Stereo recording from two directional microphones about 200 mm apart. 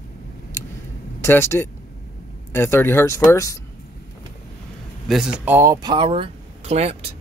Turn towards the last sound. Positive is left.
turn(degrees=-30)  # may be behind; listen again after turning